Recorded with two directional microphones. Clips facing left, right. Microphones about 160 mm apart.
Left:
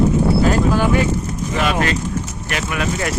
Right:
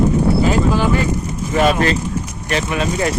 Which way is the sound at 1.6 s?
35° right (ahead or behind).